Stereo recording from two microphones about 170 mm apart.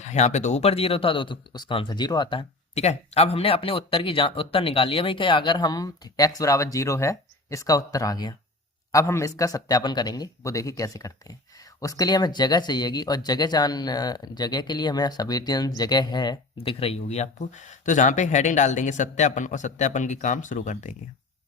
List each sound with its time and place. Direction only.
0.0 s speech: 40° left (ahead or behind); by 2.4 s 25° left (ahead or behind)
2.7 s speech: 40° left (ahead or behind)